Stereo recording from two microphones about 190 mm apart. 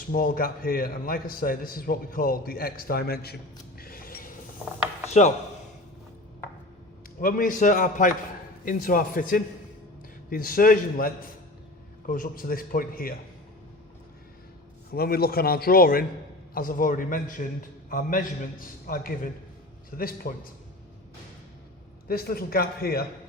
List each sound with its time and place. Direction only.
0.1 s a man's voice: 50° left (ahead or behind)
3.8 s a sound: 50° left (ahead or behind)
5.0 s speech: 35° left (ahead or behind)
7.2 s a man's voice: 50° left (ahead or behind)
14.9 s a man's voice: 55° left (ahead or behind)
22.0 s a man's voice: 50° left (ahead or behind)